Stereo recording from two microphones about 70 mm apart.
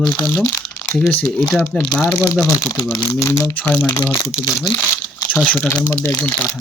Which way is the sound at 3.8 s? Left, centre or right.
Left.